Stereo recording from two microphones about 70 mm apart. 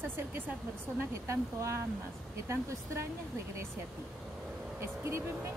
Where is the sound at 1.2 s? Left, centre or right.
Right.